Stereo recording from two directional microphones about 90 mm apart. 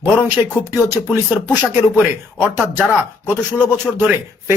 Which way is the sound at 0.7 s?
20° right (ahead or behind).